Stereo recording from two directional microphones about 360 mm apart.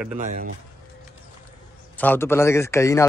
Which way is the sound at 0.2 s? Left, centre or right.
Right.